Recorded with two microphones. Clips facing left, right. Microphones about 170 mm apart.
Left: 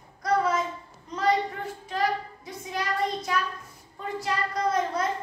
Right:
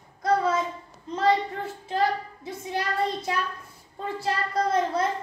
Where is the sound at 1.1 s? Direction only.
25° right (ahead or behind).